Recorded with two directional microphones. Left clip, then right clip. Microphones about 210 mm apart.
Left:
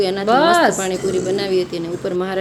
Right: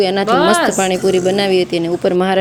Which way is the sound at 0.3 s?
Centre (ahead or behind).